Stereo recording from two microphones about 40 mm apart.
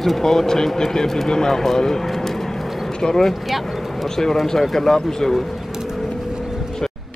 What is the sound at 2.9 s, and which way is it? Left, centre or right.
Speech, centre.